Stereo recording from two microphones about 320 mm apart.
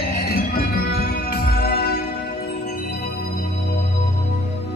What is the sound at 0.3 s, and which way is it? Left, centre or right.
Music, left.